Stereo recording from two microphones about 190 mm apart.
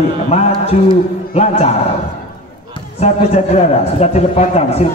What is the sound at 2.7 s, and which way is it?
A man's voice, 35° left (ahead or behind).